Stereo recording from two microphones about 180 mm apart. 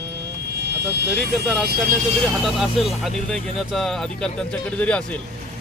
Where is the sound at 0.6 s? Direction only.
65° right (ahead or behind).